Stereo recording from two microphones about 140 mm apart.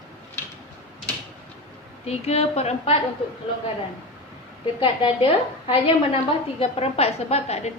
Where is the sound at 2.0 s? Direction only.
50° left (ahead or behind).